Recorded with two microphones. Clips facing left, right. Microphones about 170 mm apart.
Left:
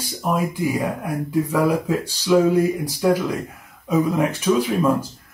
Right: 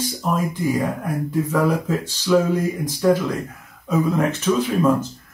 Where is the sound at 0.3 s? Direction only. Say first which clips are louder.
Even; 10° left (ahead or behind).